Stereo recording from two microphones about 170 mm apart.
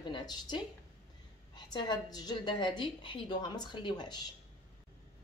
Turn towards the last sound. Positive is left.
turn(degrees=25)  # may be behind; listen again after turning